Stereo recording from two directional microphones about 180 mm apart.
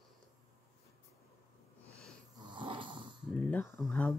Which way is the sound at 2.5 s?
25° right (ahead or behind).